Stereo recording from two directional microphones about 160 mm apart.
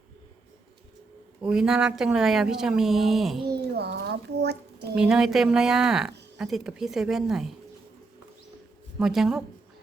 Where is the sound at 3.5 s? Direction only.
90° right.